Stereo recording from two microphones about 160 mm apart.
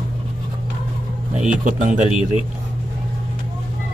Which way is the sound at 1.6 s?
55° right (ahead or behind).